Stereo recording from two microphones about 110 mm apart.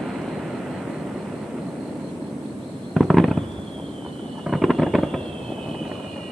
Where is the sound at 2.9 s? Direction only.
Centre (ahead or behind).